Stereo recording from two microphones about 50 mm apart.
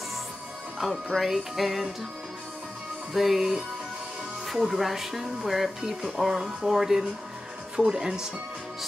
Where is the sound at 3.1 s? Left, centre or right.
Centre.